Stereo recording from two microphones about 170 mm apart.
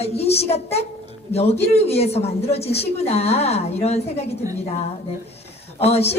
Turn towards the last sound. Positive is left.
turn(degrees=35)  # may be behind; listen again after turning